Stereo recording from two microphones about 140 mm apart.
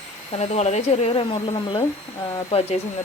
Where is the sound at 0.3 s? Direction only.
50° left (ahead or behind).